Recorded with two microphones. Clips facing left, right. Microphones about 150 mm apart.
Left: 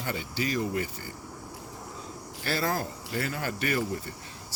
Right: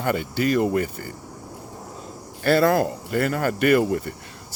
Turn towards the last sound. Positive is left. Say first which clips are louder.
# right 11 dB
turn(degrees=-65)  # may be behind; listen again after turning